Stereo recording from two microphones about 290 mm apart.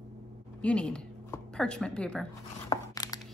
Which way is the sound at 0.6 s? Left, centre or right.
Centre.